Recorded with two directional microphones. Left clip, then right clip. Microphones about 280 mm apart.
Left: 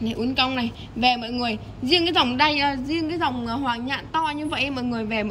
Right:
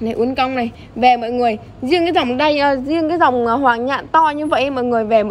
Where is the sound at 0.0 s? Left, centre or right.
Centre.